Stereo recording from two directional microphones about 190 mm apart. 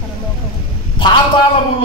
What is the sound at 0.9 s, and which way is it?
Speech, 25° left (ahead or behind).